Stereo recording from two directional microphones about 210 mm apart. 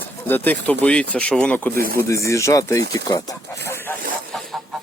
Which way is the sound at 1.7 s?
45° right (ahead or behind).